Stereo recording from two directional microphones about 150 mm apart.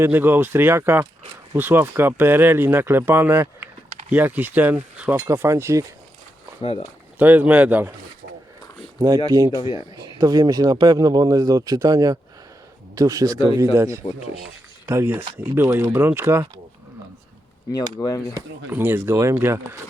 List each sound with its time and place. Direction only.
0.0 s speech: 15° right (ahead or behind)
6.6 s speech: 40° left (ahead or behind)
7.2 s speech: 10° right (ahead or behind)
9.0 s speech: 25° right (ahead or behind)
17.7 s speech: 25° left (ahead or behind)
18.3 s speech: 15° right (ahead or behind)